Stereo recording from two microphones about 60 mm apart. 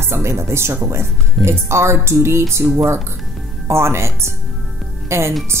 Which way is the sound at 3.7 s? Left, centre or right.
Right.